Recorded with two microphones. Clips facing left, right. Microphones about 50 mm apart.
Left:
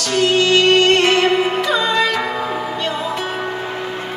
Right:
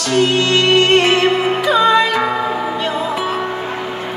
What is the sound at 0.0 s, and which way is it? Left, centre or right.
Music, centre.